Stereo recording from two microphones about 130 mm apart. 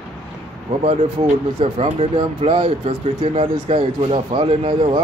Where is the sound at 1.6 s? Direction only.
45° right (ahead or behind).